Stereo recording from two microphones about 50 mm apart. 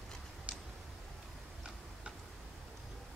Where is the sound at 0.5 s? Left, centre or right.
Right.